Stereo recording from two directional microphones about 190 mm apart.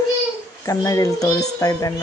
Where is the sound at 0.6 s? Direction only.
15° left (ahead or behind).